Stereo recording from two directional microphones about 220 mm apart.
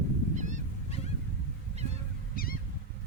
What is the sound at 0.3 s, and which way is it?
Goose, 35° right (ahead or behind).